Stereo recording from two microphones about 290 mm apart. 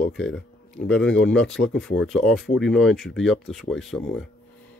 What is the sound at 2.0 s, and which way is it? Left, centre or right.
Speech, centre.